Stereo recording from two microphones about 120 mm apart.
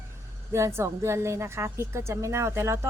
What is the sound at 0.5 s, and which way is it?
Speech, 20° right (ahead or behind).